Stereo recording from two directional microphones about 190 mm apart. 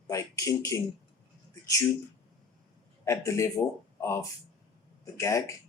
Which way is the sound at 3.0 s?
15° left (ahead or behind).